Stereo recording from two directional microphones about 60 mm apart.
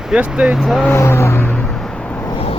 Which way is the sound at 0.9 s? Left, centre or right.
Left.